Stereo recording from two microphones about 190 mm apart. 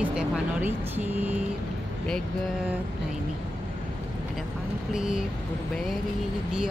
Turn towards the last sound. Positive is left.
turn(degrees=-5)  # may be behind; listen again after turning